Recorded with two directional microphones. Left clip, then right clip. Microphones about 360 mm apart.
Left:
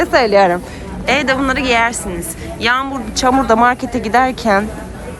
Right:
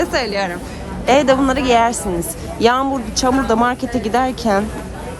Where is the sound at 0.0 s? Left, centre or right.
Centre.